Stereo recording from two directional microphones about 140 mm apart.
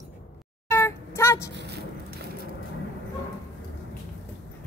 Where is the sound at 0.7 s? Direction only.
20° left (ahead or behind).